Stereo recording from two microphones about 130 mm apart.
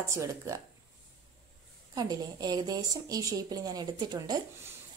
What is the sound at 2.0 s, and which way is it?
A woman's voice, 30° right (ahead or behind).